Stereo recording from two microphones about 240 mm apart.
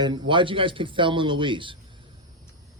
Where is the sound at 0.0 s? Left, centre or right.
Centre.